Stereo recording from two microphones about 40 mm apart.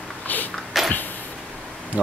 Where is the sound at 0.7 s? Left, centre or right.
Centre.